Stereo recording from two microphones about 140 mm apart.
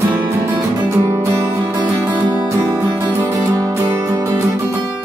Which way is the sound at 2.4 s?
25° right (ahead or behind).